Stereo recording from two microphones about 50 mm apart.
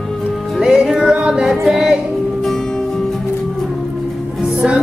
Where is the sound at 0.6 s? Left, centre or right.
Centre.